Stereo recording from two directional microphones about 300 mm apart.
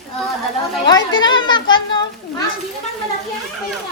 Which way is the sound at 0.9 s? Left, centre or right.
Centre.